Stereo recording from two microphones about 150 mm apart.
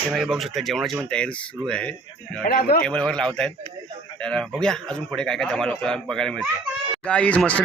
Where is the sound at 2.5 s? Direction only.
85° left.